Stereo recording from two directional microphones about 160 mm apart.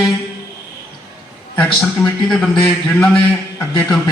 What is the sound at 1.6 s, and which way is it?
Speech, 5° left (ahead or behind).